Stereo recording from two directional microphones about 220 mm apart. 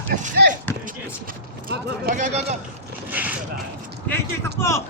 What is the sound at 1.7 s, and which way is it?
Speech, 35° right (ahead or behind).